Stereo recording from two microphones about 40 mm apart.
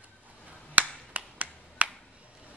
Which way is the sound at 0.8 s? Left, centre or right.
Right.